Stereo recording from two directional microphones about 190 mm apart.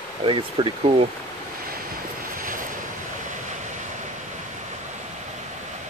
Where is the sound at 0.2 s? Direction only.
25° right (ahead or behind).